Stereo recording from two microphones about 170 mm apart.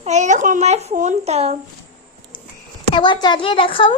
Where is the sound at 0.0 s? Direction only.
45° right (ahead or behind).